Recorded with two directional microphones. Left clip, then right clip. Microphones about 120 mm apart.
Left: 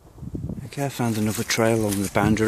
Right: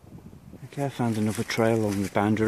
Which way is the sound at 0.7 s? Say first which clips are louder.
Left 2 dB; 5° left (ahead or behind).